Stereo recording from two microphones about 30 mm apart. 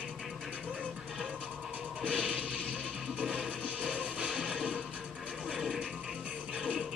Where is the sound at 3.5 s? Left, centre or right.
Right.